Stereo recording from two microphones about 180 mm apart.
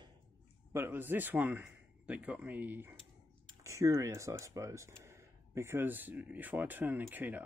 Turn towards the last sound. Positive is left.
turn(degrees=-10)  # may be behind; listen again after turning